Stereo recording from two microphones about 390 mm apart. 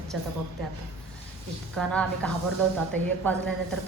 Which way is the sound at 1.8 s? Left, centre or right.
Centre.